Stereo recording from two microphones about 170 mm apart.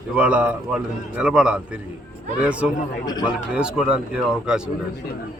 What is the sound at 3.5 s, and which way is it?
A man's voice, 5° right (ahead or behind).